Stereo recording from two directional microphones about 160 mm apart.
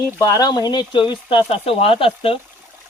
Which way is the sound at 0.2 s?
20° left (ahead or behind).